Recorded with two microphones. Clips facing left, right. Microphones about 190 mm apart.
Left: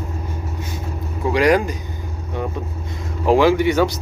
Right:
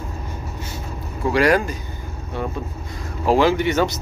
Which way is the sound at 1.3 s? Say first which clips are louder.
Left 2 dB; 15° left (ahead or behind).